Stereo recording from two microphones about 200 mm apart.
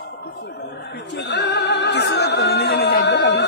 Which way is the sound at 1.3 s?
55° left (ahead or behind).